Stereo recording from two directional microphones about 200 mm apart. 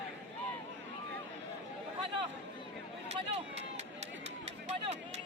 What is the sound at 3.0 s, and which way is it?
Speech, 30° right (ahead or behind).